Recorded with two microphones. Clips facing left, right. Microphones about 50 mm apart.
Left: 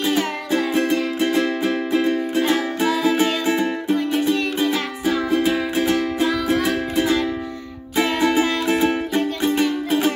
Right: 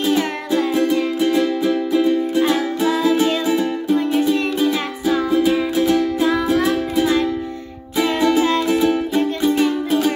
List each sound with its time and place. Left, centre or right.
0.5 s music: left
8.2 s music: left